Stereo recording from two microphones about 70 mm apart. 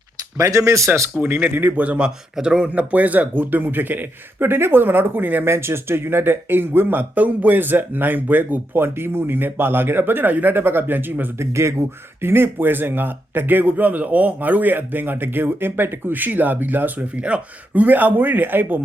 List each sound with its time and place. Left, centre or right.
0.3 s speech: right
1.2 s a man's voice: right
2.6 s a man's voice: right
11.3 s a man's voice: right